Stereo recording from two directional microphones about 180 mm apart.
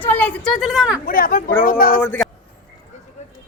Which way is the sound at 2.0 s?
10° left (ahead or behind).